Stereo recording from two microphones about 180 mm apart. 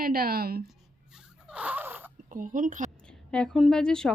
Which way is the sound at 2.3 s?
45° right (ahead or behind).